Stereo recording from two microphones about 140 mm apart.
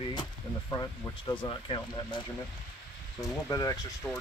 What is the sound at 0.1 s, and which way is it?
Speech, 30° left (ahead or behind).